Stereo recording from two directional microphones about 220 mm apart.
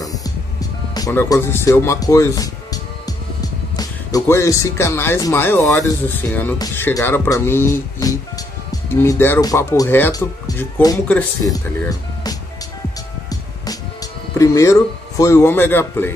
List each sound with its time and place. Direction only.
0.0 s speech: 15° left (ahead or behind)
14.4 s speech: 15° left (ahead or behind)